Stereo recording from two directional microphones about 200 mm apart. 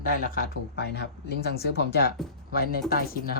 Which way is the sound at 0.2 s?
45° left (ahead or behind).